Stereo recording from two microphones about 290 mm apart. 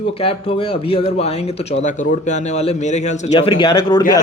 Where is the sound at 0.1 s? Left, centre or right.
Centre.